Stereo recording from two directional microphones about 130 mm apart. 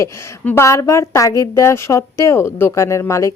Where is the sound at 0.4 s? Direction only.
20° left (ahead or behind).